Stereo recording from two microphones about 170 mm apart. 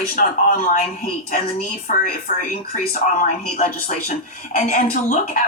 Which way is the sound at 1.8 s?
50° left (ahead or behind).